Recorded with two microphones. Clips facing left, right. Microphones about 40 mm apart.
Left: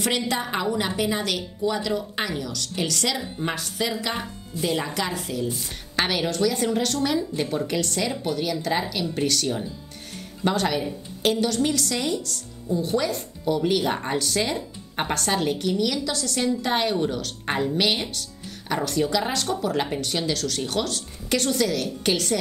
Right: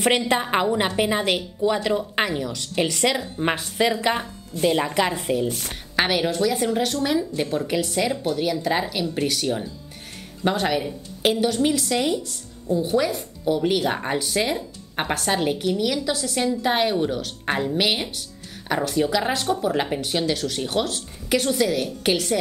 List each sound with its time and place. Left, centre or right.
0.3 s a woman's voice: right
5.9 s a woman's voice: centre